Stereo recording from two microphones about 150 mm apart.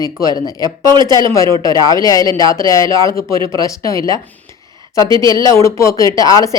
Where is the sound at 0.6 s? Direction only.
30° right (ahead or behind).